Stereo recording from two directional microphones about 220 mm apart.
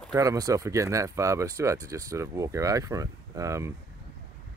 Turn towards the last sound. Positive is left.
turn(degrees=-15)  # may be behind; listen again after turning